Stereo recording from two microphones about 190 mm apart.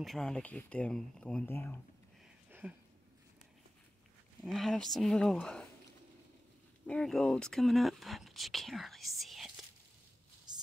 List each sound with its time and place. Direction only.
0.0 s speech: centre (ahead or behind)
2.6 s a sound: 10° right (ahead or behind)
4.4 s speech: centre (ahead or behind)
6.9 s speech: 5° left (ahead or behind)